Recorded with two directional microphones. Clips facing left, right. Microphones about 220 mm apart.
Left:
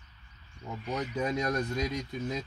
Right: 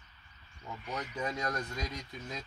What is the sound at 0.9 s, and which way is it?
Speech, 20° left (ahead or behind).